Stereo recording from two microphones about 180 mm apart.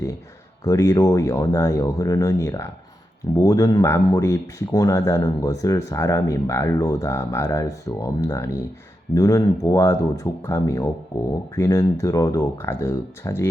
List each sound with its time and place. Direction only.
0.6 s speech: 15° left (ahead or behind)